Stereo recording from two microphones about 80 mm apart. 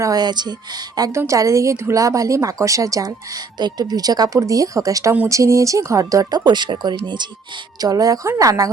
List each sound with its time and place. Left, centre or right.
0.0 s speech: right
1.1 s speech: right
6.4 s speech: right
7.8 s speech: right